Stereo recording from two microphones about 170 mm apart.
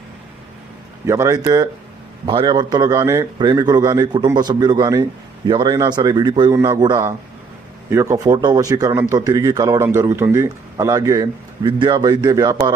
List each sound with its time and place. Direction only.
1.0 s a man's voice: 15° right (ahead or behind)